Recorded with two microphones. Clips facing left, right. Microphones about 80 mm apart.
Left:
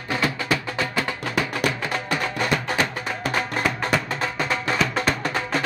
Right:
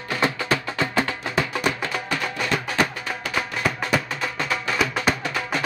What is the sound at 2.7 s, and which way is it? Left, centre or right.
Music, left.